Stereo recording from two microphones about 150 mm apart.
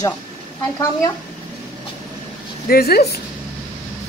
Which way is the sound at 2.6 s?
90° left.